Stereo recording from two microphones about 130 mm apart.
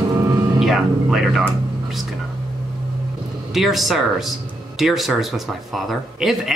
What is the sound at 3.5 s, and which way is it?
Speech, centre (ahead or behind).